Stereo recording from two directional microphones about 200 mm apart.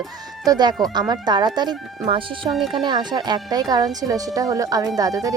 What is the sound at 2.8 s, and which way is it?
Speech, 20° right (ahead or behind).